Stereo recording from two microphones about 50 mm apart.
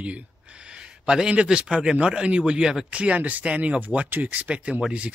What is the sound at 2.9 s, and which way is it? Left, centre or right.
Speech, right.